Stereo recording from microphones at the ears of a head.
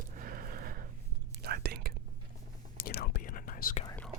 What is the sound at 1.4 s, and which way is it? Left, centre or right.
Whispering, right.